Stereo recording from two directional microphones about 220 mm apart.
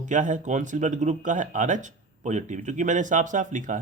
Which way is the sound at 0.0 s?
35° right (ahead or behind).